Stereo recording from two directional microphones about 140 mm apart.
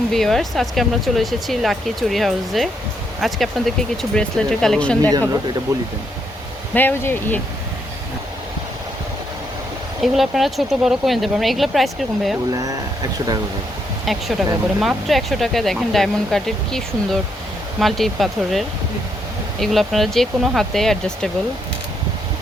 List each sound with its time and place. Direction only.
0.1 s speech: centre (ahead or behind)
5.7 s speech: 25° right (ahead or behind)
6.7 s speech: 15° left (ahead or behind)
10.0 s speech: centre (ahead or behind)
12.5 s speech: 25° right (ahead or behind)
14.0 s speech: centre (ahead or behind)